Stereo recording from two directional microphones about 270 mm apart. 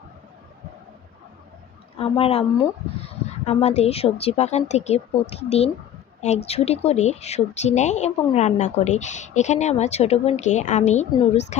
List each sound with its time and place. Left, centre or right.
2.0 s speech: left